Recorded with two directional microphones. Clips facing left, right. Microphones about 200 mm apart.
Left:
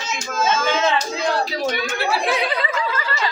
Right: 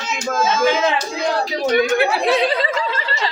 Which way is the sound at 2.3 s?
30° right (ahead or behind).